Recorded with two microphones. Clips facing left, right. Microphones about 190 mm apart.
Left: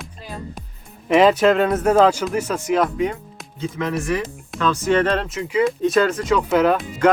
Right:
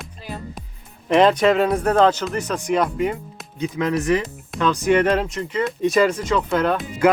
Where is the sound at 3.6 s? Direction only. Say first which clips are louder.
Right 2 dB; 20° right (ahead or behind).